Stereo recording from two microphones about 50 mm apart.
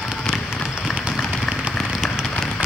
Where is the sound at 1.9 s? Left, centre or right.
Centre.